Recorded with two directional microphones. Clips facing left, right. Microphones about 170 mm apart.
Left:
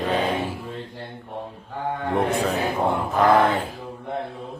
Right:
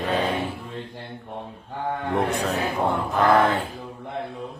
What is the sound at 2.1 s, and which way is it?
Speech, centre (ahead or behind).